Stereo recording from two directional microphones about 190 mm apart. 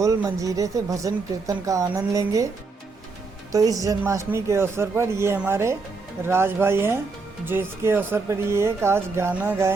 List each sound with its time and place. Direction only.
0.0 s speech: 15° right (ahead or behind)
3.5 s speech: 20° right (ahead or behind)